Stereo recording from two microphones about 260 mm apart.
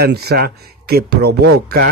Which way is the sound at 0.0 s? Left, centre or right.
Right.